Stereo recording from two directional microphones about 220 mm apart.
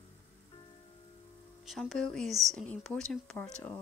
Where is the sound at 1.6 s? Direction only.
Centre (ahead or behind).